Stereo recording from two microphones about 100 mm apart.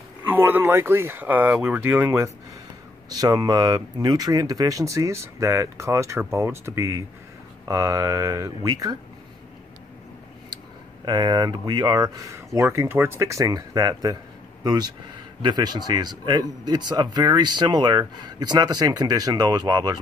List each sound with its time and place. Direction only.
0.2 s speech: 20° right (ahead or behind)
3.1 s speech: 40° right (ahead or behind)
11.1 s speech: 40° right (ahead or behind)